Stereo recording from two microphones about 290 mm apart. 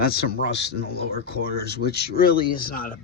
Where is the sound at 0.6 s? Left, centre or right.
Left.